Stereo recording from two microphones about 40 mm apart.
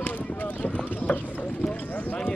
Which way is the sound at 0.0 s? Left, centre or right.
Left.